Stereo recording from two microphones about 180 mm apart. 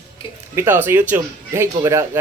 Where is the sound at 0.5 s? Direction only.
10° right (ahead or behind).